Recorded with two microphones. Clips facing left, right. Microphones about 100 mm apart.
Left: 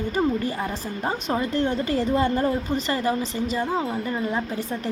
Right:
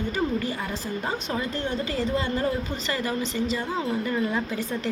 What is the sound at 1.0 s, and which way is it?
A woman's voice, 45° left (ahead or behind).